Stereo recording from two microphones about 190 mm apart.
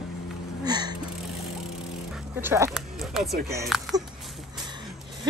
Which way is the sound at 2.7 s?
Centre (ahead or behind).